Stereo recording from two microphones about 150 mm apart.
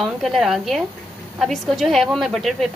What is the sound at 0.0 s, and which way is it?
A woman's voice, centre (ahead or behind).